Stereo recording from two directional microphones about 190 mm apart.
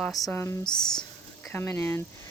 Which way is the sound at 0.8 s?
5° left (ahead or behind).